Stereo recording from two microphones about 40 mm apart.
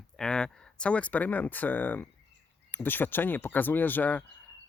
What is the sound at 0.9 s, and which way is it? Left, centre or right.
Speech, left.